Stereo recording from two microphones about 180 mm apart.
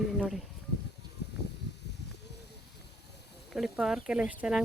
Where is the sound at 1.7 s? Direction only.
75° left (ahead or behind).